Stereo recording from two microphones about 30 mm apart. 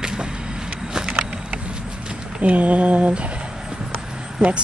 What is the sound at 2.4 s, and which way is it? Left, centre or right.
Mantra, right.